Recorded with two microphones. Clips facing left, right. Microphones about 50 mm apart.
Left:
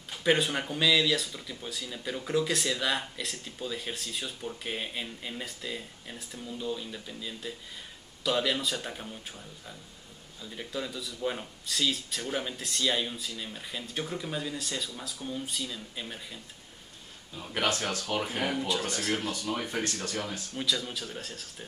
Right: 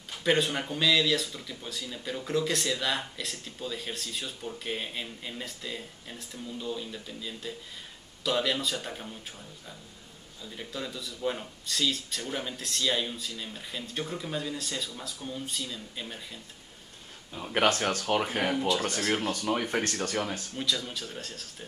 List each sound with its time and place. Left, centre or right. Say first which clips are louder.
0.1 s speech: even; centre
10.4 s speech: left 1 dB; centre
17.6 s speech: right 4 dB; right
20.5 s speech: left 2 dB; centre